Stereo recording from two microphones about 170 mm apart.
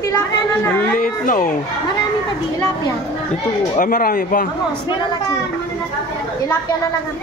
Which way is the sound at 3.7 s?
50° left (ahead or behind).